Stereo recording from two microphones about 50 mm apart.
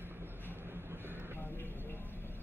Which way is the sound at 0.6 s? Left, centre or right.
Right.